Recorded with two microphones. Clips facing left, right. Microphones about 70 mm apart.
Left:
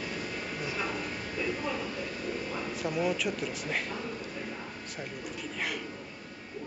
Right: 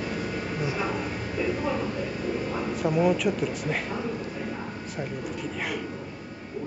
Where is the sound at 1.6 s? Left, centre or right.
Centre.